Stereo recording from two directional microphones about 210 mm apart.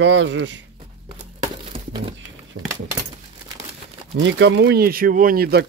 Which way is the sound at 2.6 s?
90° right.